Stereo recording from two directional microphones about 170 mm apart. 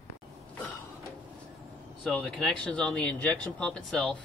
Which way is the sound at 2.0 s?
5° left (ahead or behind).